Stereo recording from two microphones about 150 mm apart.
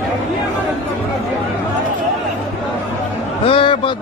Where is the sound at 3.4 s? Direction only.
35° left (ahead or behind).